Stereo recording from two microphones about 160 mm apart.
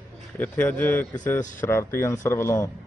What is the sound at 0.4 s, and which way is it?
A man's voice, 10° left (ahead or behind).